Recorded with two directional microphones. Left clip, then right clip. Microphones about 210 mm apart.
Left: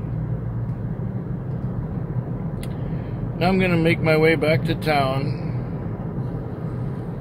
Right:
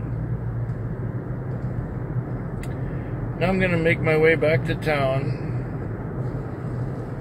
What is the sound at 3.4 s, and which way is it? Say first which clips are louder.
Speech: left 1 dB; 20° left (ahead or behind).